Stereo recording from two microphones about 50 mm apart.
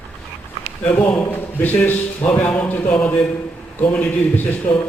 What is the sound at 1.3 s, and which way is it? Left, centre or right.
A man's voice, left.